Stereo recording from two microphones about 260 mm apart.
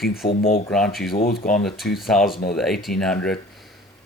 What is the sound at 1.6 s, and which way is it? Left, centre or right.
Speech, centre.